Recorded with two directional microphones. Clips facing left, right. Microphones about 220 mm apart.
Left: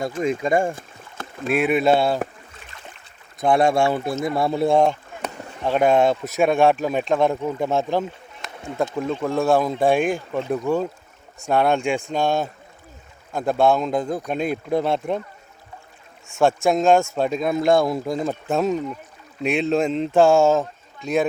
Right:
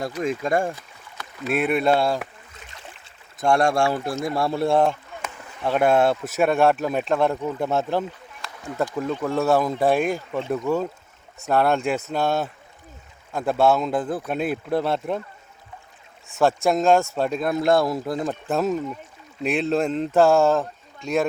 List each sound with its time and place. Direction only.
0.2 s speech: centre (ahead or behind)
0.7 s rowboat: 50° left (ahead or behind)
1.5 s speech: centre (ahead or behind)
2.2 s boat: 45° left (ahead or behind)
3.4 s speech: centre (ahead or behind)
5.2 s a sound: 35° left (ahead or behind)
5.7 s speech: 5° right (ahead or behind)
8.4 s speech: 25° left (ahead or behind)
9.3 s speech: 10° left (ahead or behind)
9.9 s speech: centre (ahead or behind)
16.3 s speech: centre (ahead or behind)